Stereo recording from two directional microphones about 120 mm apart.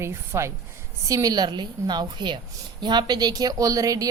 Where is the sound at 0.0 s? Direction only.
20° right (ahead or behind).